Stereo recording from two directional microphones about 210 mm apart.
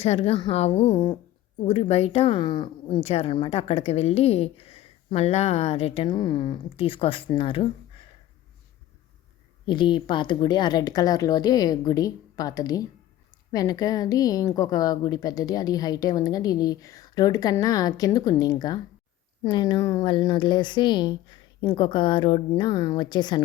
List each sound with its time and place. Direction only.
0.0 s speech: 30° left (ahead or behind)
9.6 s a woman's voice: 20° left (ahead or behind)